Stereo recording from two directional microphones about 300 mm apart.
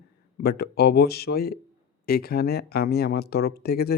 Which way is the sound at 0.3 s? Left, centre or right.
Left.